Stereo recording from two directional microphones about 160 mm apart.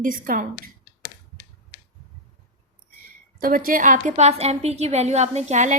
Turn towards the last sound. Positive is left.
turn(degrees=-50)  # may be behind; listen again after turning